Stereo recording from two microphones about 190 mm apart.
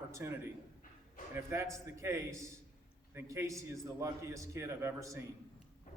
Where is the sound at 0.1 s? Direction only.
15° right (ahead or behind).